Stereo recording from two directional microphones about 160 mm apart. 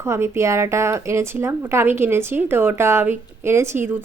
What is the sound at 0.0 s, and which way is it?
Speech, 15° right (ahead or behind).